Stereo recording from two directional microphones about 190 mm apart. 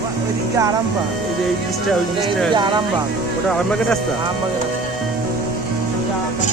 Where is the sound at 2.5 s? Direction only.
25° right (ahead or behind).